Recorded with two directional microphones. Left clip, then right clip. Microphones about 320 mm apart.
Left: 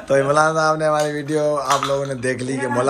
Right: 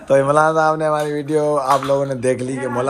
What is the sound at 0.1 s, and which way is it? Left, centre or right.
A man's voice, centre.